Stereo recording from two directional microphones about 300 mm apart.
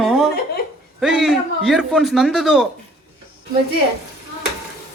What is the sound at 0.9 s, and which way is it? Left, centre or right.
A man's voice, centre.